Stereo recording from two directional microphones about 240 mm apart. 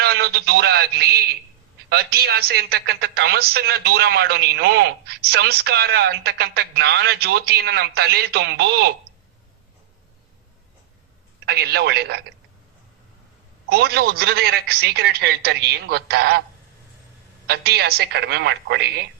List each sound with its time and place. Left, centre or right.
0.0 s a man's voice: right
11.4 s a woman's voice: right
13.7 s speech: right
17.4 s a woman's voice: right